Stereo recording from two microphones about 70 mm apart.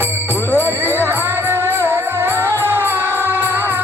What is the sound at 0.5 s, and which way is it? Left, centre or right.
Music, left.